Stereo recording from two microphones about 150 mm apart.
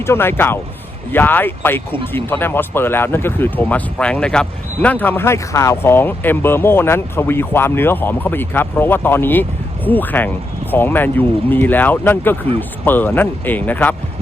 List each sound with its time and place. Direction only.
0.0 s speech: 15° left (ahead or behind)